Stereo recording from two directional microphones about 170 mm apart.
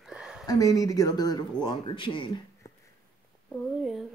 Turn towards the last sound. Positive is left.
turn(degrees=0)  # may be behind; listen again after turning